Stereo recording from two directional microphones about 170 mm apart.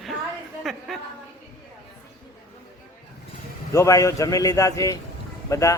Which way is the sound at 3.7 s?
20° left (ahead or behind).